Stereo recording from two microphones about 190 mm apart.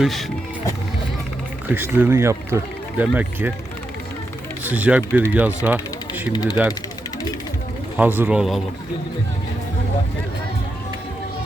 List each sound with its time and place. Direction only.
0.0 s speech: centre (ahead or behind)
1.7 s speech: 10° right (ahead or behind)
4.6 s speech: 10° right (ahead or behind)
5.6 s a sound: 10° right (ahead or behind)
6.3 s speech: 20° left (ahead or behind)
7.9 s speech: 10° right (ahead or behind)